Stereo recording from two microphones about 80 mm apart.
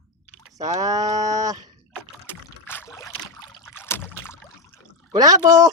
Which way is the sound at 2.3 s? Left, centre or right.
Left.